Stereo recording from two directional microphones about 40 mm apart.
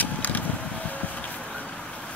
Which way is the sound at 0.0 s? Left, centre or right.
Left.